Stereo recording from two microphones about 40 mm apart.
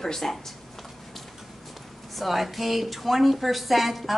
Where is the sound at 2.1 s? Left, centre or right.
Centre.